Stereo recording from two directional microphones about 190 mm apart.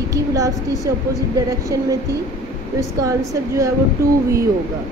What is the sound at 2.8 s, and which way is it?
Speech, 15° right (ahead or behind).